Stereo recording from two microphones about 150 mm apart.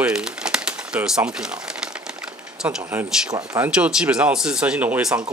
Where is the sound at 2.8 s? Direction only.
15° right (ahead or behind).